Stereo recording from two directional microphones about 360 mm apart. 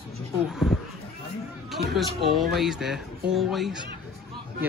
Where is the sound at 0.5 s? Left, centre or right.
Centre.